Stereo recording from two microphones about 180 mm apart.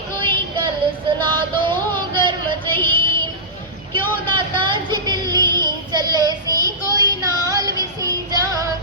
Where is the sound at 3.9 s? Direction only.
25° right (ahead or behind).